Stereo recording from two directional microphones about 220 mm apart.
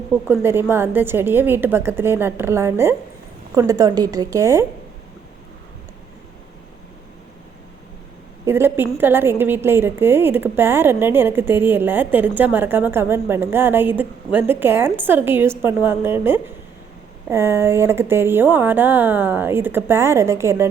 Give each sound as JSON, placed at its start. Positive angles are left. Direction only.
{"t": 0.1, "sound": "a woman's voice", "side_deg": -10}
{"t": 8.4, "sound": "a woman's voice", "side_deg": -10}